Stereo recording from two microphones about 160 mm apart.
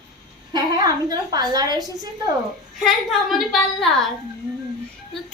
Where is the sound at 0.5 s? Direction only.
25° right (ahead or behind).